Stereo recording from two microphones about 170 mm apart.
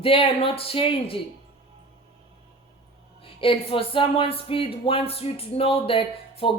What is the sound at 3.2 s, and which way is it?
Speech, 30° left (ahead or behind).